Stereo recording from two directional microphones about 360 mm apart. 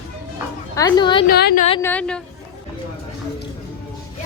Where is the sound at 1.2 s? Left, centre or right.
Left; by 2.2 s centre.